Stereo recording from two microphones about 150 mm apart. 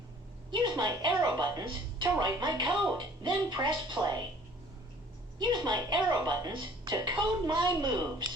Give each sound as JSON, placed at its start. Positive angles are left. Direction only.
{"t": 0.5, "sound": "speech", "side_deg": -30}
{"t": 2.6, "sound": "speech", "side_deg": 0}
{"t": 3.2, "sound": "speech", "side_deg": -25}
{"t": 4.0, "sound": "speech", "side_deg": -5}
{"t": 5.4, "sound": "speech", "side_deg": -30}